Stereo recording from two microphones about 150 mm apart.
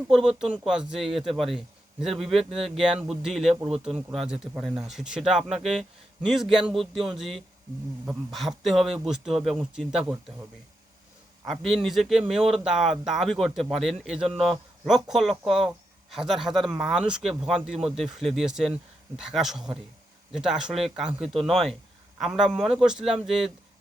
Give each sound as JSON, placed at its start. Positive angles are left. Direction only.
{"t": 0.1, "sound": "speech", "side_deg": -5}
{"t": 4.1, "sound": "speech", "side_deg": -5}
{"t": 5.5, "sound": "speech", "side_deg": -45}
{"t": 6.2, "sound": "speech", "side_deg": 0}
{"t": 11.4, "sound": "speech", "side_deg": 0}